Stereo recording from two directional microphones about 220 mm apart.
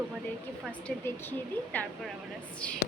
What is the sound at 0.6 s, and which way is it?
A woman's voice, 5° left (ahead or behind).